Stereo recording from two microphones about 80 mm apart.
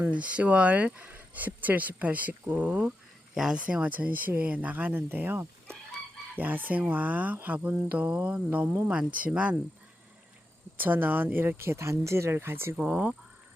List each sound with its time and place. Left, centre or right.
0.0 s speech: centre
10.8 s speech: right
12.7 s speech: centre